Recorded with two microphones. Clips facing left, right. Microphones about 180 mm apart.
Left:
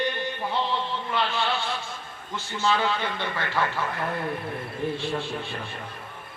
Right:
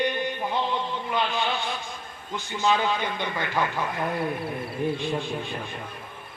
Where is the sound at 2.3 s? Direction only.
15° right (ahead or behind).